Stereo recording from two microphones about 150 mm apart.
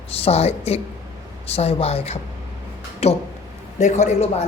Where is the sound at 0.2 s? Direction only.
45° left (ahead or behind).